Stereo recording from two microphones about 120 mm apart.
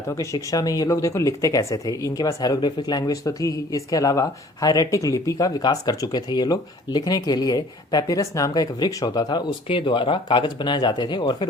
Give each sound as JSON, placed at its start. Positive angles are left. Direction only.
{"t": 0.2, "sound": "speech", "side_deg": 30}